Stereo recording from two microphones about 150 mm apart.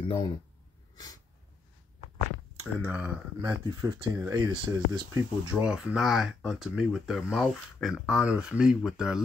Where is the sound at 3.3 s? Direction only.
20° right (ahead or behind).